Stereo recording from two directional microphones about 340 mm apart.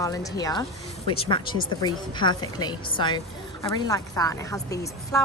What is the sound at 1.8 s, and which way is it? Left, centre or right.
Speech, centre.